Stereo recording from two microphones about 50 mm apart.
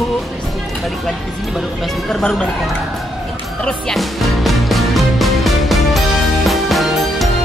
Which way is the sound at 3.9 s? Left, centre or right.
Centre.